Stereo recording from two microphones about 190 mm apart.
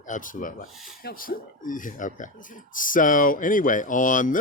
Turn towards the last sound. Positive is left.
turn(degrees=45)  # may be behind; listen again after turning